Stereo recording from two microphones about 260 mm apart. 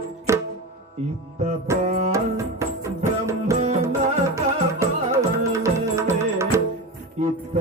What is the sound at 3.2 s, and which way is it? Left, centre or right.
Music, centre.